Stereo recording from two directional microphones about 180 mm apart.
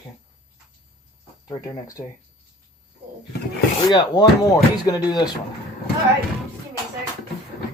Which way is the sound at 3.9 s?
20° left (ahead or behind).